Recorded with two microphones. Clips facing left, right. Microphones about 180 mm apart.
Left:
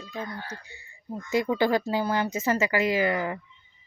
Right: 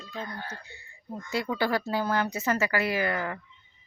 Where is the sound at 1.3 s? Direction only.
15° left (ahead or behind).